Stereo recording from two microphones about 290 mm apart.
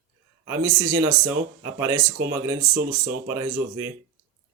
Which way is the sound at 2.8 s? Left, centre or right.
Right.